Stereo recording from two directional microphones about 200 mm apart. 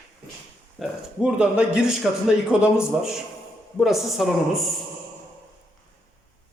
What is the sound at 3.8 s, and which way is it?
Speech, centre (ahead or behind).